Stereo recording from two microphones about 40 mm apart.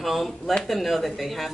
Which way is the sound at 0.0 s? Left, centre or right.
Centre.